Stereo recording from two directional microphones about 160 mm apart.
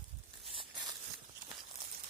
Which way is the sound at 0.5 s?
30° right (ahead or behind).